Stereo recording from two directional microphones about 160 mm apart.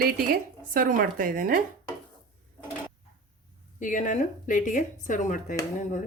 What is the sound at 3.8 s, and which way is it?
A woman's voice, 55° left (ahead or behind).